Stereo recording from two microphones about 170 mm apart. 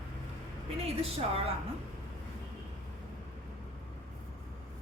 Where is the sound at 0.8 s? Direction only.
35° right (ahead or behind).